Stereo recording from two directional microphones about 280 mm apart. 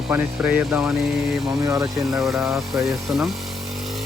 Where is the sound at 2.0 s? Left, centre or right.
Centre.